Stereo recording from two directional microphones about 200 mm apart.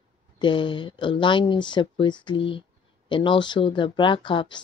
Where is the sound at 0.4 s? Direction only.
25° left (ahead or behind).